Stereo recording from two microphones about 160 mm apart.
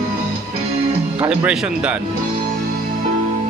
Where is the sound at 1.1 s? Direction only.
5° right (ahead or behind).